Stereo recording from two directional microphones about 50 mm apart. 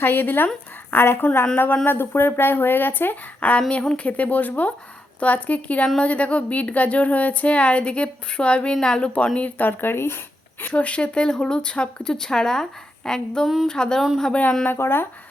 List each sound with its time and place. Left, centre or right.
0.0 s a woman's voice: left
1.0 s speech: left
3.7 s a woman's voice: left
9.0 s a woman's voice: left
9.6 s speech: left
10.6 s a woman's voice: left; by 12.6 s centre
13.1 s a sound: centre
14.7 s speech: left